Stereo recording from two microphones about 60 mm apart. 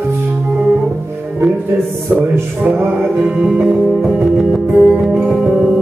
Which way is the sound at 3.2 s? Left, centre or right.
Centre.